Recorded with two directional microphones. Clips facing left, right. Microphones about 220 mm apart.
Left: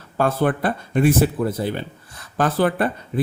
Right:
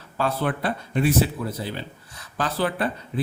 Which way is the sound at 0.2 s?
50° left (ahead or behind).